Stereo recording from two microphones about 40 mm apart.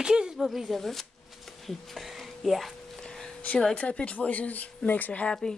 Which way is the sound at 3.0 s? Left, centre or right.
Centre.